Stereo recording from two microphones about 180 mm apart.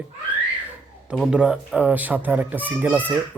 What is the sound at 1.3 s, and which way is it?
Speech, 5° right (ahead or behind).